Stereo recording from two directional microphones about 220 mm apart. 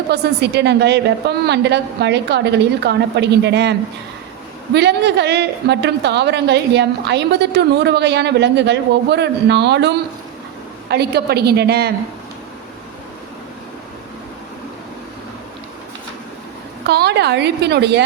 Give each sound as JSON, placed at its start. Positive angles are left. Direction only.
{"t": 0.1, "sound": "a woman's voice", "side_deg": -50}
{"t": 16.8, "sound": "a woman's voice", "side_deg": -50}